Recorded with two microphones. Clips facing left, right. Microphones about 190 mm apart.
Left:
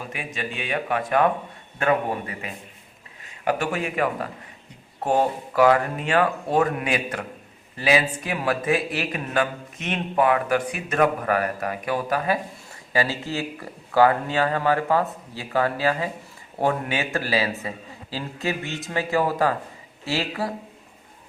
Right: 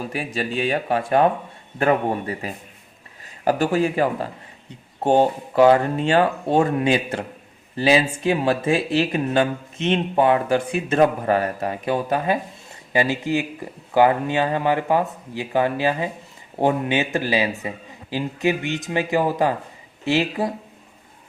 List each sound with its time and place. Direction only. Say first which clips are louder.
0.1 s speech: right 6 dB; 35° right (ahead or behind); by 20.5 s 20° right (ahead or behind)